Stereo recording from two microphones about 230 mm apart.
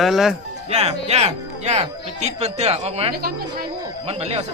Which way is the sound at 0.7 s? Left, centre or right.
Right.